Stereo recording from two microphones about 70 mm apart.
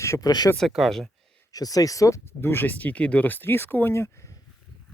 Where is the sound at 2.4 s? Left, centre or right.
Left.